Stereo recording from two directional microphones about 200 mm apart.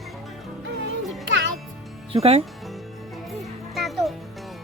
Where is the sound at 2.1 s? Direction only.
30° right (ahead or behind).